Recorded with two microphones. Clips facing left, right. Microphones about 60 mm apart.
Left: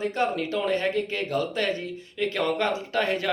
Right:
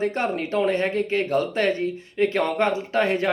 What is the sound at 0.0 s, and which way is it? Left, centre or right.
Speech, right.